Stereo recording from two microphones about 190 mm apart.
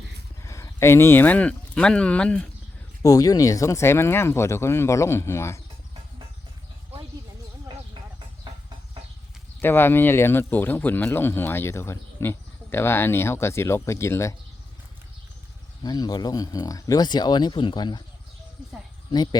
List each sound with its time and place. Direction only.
0.4 s speech: 15° left (ahead or behind)
3.0 s speech: 20° left (ahead or behind)
8.5 s a sound: 25° right (ahead or behind)
9.6 s speech: 10° left (ahead or behind)
15.8 s speech: 20° left (ahead or behind)
19.1 s speech: 20° left (ahead or behind)